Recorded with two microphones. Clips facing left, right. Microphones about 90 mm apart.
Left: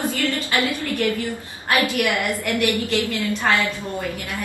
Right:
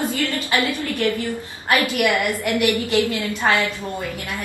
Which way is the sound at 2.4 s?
20° right (ahead or behind).